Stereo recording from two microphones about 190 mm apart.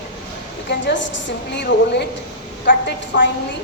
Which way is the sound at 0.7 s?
70° left (ahead or behind).